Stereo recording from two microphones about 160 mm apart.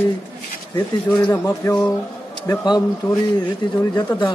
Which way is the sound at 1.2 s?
15° left (ahead or behind).